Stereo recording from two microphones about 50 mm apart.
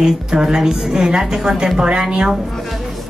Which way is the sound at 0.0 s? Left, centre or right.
Centre.